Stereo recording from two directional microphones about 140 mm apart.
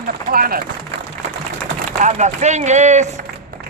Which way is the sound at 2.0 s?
55° right (ahead or behind).